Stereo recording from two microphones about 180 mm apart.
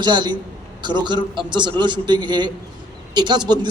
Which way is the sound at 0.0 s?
25° right (ahead or behind).